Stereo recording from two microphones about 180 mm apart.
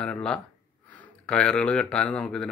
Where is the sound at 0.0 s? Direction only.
5° left (ahead or behind).